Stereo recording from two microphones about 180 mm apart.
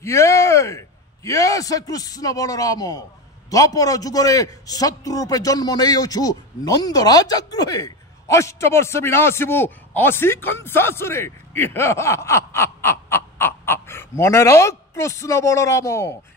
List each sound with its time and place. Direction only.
0.0 s a man's voice: 15° left (ahead or behind)